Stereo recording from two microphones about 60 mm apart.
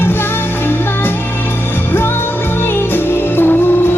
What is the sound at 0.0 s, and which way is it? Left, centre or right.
Music, left.